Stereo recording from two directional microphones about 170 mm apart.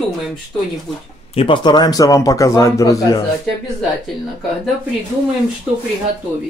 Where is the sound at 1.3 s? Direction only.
30° left (ahead or behind).